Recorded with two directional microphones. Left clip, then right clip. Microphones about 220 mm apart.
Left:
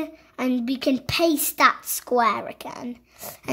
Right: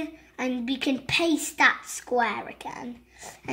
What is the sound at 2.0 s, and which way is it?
Speech, 45° left (ahead or behind).